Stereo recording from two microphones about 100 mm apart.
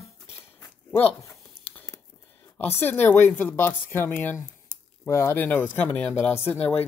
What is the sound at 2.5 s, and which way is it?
Speech, 20° left (ahead or behind).